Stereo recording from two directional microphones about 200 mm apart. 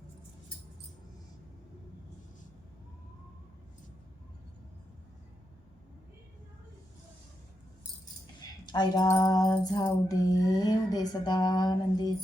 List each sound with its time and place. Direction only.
8.6 s music: 20° left (ahead or behind)